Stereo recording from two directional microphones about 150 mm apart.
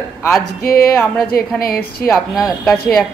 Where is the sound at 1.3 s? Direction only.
80° left.